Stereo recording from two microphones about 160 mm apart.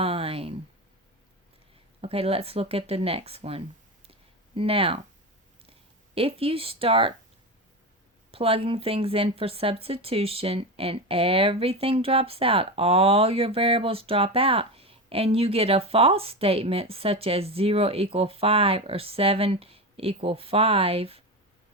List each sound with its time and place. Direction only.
0.0 s a sound: 35° right (ahead or behind)
2.0 s speech: 40° right (ahead or behind)
6.1 s speech: 35° right (ahead or behind)
8.3 s speech: 35° right (ahead or behind)